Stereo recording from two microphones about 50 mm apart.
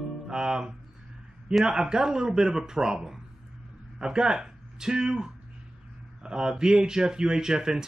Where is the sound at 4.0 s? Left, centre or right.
Centre.